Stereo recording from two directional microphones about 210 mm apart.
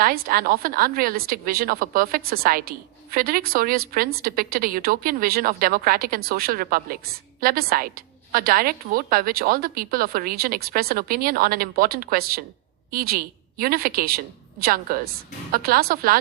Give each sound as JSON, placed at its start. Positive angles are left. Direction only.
{"t": 0.0, "sound": "a woman's voice", "side_deg": -45}